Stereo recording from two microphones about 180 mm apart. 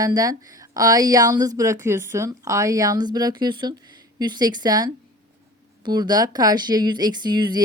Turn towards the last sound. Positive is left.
turn(degrees=-25)  # may be behind; listen again after turning